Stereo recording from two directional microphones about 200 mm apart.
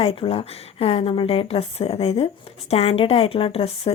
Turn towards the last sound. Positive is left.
turn(degrees=30)  # may be behind; listen again after turning